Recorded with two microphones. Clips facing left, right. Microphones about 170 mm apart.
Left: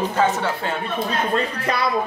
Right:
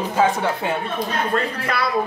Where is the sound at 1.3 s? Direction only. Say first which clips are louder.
Even; 20° left (ahead or behind).